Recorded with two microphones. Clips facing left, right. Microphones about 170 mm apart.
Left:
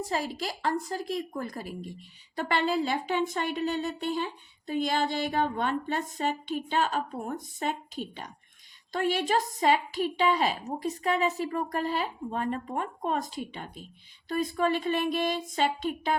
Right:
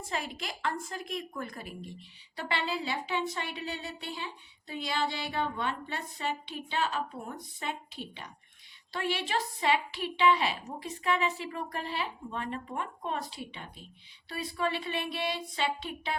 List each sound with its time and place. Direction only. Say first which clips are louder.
0.0 s a woman's voice: left 6 dB; 35° left (ahead or behind)